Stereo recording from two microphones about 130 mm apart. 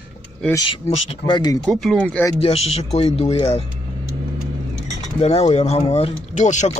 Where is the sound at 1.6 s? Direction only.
Centre (ahead or behind).